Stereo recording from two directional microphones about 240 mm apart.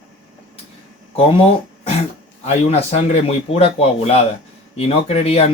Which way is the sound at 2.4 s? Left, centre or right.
Left.